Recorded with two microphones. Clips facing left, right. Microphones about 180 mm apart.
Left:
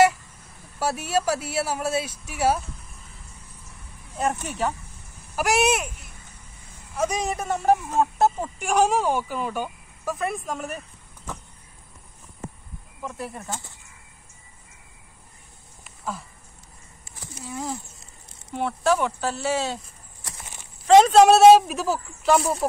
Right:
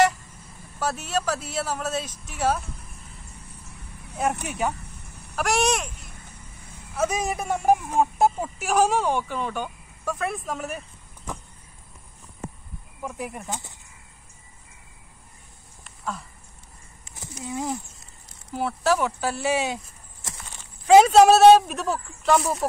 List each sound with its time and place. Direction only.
0.7 s speech: 10° left (ahead or behind)
4.2 s speech: 10° right (ahead or behind)
5.3 s speech: 5° left (ahead or behind)
6.9 s speech: 5° right (ahead or behind)
13.0 s speech: 10° right (ahead or behind)
15.8 s a sound: centre (ahead or behind)
17.1 s a sound: 20° right (ahead or behind)
18.5 s speech: 5° right (ahead or behind); by 20.3 s 20° right (ahead or behind)
20.8 s speech: 5° right (ahead or behind)